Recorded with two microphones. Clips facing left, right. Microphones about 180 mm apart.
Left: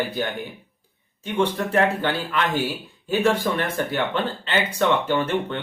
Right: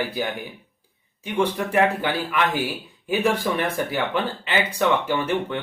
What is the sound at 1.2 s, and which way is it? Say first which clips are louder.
Speech: even; 10° right (ahead or behind).